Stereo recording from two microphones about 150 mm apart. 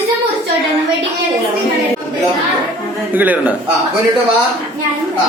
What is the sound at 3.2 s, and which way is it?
Speech, 10° right (ahead or behind).